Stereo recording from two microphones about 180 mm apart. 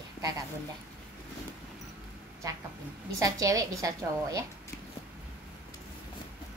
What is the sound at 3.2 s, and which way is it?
A woman's voice, 20° right (ahead or behind).